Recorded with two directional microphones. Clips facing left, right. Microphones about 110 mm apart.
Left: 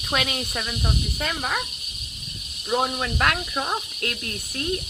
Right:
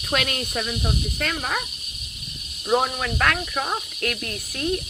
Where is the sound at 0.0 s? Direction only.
5° left (ahead or behind).